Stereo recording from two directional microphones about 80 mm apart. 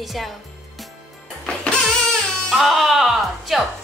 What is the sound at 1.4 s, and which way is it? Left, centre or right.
Music, centre.